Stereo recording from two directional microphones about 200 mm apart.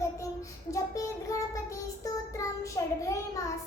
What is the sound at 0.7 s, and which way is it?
Child singing, 15° left (ahead or behind).